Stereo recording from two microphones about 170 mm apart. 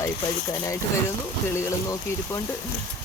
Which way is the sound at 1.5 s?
15° left (ahead or behind).